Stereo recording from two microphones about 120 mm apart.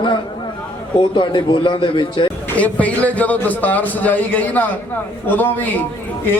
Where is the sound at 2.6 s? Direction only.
10° left (ahead or behind).